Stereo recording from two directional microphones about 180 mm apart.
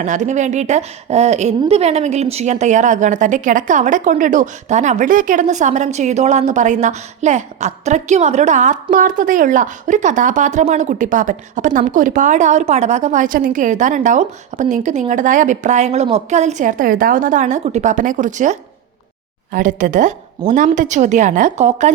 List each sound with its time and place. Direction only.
0.0 s a woman's voice: 45° right (ahead or behind)